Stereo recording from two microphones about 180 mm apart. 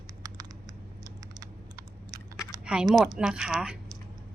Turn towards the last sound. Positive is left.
turn(degrees=-5)  # may be behind; listen again after turning